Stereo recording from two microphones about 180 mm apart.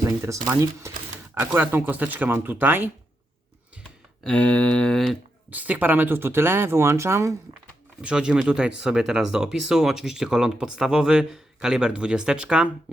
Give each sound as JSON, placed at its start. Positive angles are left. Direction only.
{"t": 0.4, "sound": "speech", "side_deg": -15}
{"t": 4.2, "sound": "speech", "side_deg": 5}
{"t": 5.5, "sound": "speech", "side_deg": -10}
{"t": 8.0, "sound": "speech", "side_deg": -5}